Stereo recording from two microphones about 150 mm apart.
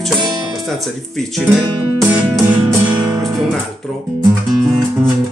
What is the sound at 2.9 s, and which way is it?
Music, 30° right (ahead or behind).